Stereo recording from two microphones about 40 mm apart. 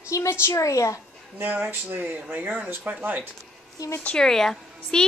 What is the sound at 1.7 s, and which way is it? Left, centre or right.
Speech, right.